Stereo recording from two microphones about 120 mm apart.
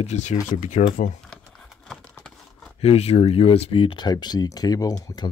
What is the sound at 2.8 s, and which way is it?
Speech, 60° left (ahead or behind).